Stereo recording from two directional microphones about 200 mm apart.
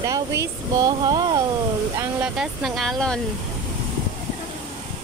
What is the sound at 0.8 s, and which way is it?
Speech, 20° right (ahead or behind).